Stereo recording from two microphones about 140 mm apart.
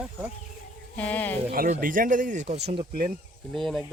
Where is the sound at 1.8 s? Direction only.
75° right (ahead or behind); by 2.9 s 50° right (ahead or behind).